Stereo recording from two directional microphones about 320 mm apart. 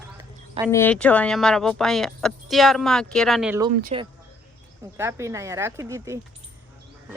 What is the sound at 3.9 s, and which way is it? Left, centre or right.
Speech, centre.